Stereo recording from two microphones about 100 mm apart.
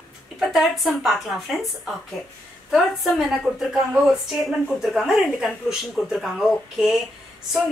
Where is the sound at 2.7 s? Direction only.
5° right (ahead or behind).